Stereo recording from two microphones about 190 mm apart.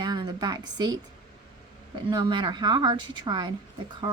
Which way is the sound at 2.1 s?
25° right (ahead or behind).